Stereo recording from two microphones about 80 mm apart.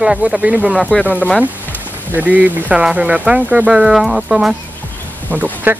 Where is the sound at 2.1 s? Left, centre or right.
Right.